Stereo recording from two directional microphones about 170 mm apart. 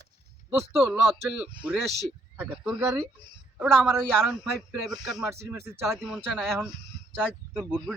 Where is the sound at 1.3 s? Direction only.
5° right (ahead or behind).